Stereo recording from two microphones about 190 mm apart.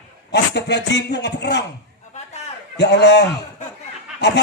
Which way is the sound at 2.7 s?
65° left (ahead or behind).